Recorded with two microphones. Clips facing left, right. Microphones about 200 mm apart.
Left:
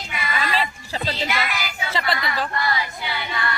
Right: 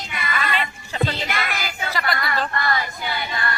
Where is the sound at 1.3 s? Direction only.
50° right (ahead or behind).